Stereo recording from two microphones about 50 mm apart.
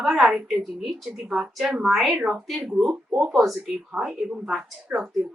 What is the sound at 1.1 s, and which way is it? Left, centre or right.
Speech, centre.